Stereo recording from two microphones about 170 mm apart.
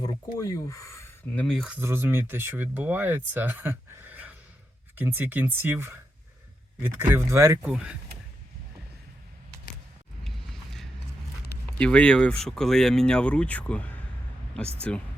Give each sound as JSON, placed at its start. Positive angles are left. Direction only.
{"t": 0.0, "sound": "speech", "side_deg": 20}
{"t": 1.4, "sound": "speech", "side_deg": 5}
{"t": 1.8, "sound": "speech", "side_deg": -15}
{"t": 7.6, "sound": "speech", "side_deg": -5}
{"t": 10.2, "sound": "a sound", "side_deg": 0}
{"t": 11.8, "sound": "speech", "side_deg": 5}